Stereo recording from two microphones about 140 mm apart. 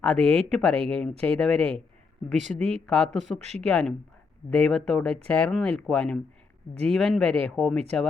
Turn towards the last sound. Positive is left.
turn(degrees=5)  # may be behind; listen again after turning